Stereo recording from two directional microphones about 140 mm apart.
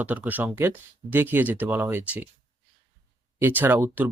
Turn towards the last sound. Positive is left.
turn(degrees=-15)  # may be behind; listen again after turning